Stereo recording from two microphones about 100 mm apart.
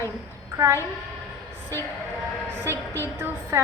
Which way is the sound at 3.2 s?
25° right (ahead or behind).